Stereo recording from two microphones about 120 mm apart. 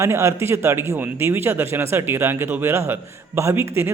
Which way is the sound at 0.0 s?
25° right (ahead or behind).